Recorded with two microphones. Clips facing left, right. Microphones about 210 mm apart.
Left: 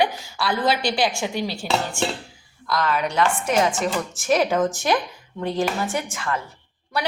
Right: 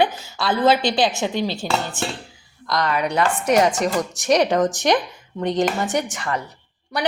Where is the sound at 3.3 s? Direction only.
65° right (ahead or behind).